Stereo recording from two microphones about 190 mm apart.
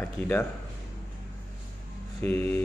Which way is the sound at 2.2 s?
10° left (ahead or behind).